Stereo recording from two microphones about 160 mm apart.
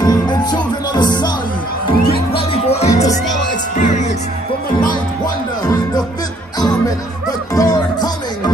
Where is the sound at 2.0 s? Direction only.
75° left (ahead or behind).